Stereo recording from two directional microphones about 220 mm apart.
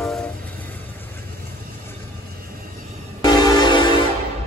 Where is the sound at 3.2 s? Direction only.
20° left (ahead or behind).